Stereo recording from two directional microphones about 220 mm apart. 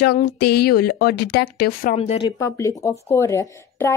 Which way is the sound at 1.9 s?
25° left (ahead or behind).